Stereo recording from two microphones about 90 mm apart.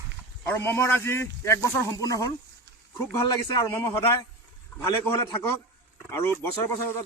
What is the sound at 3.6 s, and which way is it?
Speech, 40° left (ahead or behind).